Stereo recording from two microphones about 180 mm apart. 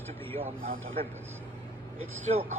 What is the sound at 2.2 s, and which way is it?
Speech, 40° right (ahead or behind).